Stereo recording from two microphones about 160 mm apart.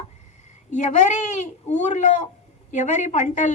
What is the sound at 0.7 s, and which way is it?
A woman's voice, 50° left (ahead or behind).